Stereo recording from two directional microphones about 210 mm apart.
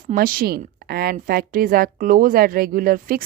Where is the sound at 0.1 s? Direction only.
40° right (ahead or behind).